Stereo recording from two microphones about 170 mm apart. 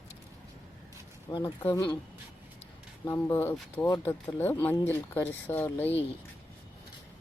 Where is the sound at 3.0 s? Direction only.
15° left (ahead or behind).